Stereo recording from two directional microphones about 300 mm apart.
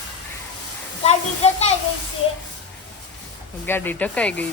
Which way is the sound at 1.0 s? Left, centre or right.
Left.